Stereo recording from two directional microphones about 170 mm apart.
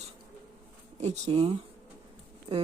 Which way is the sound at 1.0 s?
40° right (ahead or behind).